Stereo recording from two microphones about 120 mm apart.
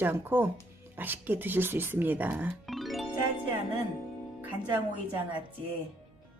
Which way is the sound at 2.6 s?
Centre (ahead or behind).